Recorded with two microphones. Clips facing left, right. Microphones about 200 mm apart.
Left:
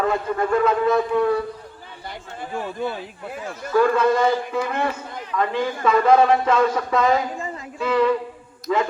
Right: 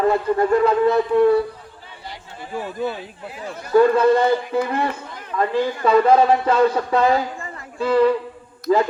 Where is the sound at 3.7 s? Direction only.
30° right (ahead or behind).